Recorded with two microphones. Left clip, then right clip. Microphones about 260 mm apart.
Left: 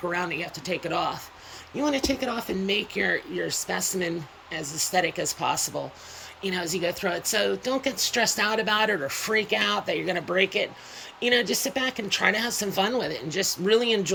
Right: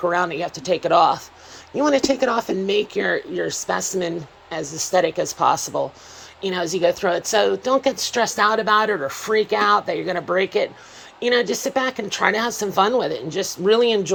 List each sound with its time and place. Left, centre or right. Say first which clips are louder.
0.3 s speech: right 6 dB; right
0.5 s speech: right 11 dB; centre